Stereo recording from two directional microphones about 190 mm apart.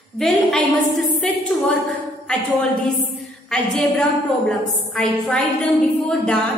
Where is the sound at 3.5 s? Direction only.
Centre (ahead or behind).